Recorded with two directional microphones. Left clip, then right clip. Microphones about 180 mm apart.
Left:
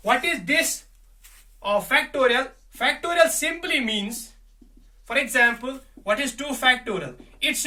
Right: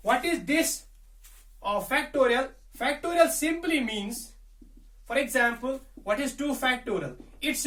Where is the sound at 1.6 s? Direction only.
10° left (ahead or behind).